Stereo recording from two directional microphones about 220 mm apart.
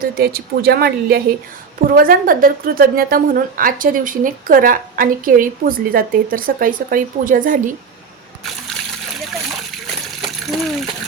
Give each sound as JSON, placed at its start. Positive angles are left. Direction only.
{"t": 0.0, "sound": "a woman's voice", "side_deg": -45}
{"t": 10.2, "sound": "water", "side_deg": 0}